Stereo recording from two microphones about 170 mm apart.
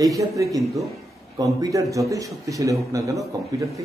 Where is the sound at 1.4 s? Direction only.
20° right (ahead or behind).